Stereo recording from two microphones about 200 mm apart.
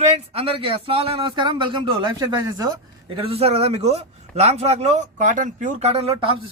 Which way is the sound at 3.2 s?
30° right (ahead or behind).